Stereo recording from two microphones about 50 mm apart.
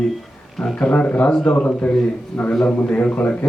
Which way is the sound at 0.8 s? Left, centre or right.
Left.